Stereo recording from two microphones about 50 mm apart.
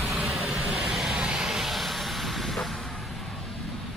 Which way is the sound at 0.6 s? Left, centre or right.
Centre.